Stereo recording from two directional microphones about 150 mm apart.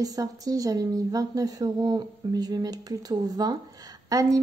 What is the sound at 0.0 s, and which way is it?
Speech, 25° right (ahead or behind).